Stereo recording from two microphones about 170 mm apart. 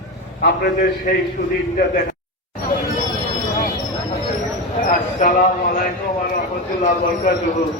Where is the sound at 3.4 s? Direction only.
50° left (ahead or behind).